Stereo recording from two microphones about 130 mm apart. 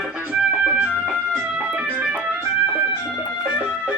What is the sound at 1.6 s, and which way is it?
Organ, 10° right (ahead or behind).